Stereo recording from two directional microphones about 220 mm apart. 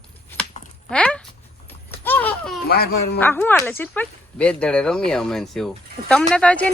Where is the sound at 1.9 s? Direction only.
10° left (ahead or behind).